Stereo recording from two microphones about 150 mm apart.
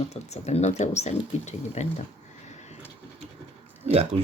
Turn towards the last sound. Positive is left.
turn(degrees=-40)  # may be behind; listen again after turning